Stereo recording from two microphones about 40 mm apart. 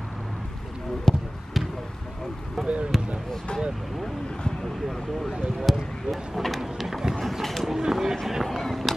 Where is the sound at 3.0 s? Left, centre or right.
Centre.